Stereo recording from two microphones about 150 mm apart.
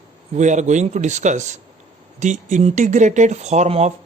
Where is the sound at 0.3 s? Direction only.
55° right (ahead or behind).